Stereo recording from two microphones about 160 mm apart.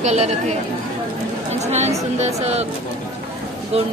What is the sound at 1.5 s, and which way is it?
Speech, 45° right (ahead or behind).